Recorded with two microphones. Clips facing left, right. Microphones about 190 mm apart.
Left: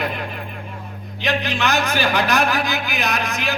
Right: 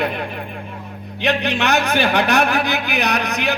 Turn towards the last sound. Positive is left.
turn(degrees=-65)  # may be behind; listen again after turning